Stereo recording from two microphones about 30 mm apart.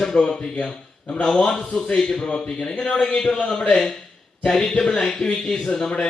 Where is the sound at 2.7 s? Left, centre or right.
Left.